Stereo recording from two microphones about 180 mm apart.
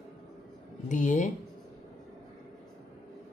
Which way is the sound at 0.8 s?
45° left (ahead or behind).